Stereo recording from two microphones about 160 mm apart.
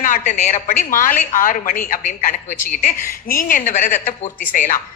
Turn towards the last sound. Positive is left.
turn(degrees=55)  # may be behind; listen again after turning